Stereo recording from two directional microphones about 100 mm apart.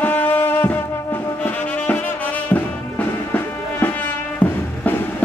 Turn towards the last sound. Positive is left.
turn(degrees=15)  # may be behind; listen again after turning